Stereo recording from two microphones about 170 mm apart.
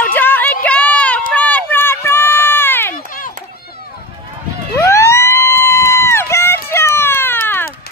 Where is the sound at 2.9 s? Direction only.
55° left (ahead or behind).